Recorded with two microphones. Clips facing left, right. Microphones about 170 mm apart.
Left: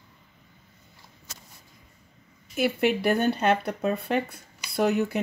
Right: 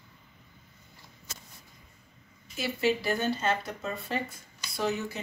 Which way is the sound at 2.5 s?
60° left (ahead or behind).